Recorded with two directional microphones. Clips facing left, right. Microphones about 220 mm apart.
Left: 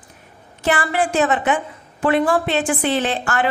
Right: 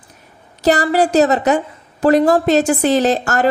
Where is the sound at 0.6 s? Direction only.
40° right (ahead or behind).